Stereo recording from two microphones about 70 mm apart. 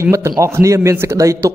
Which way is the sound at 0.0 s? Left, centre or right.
Right.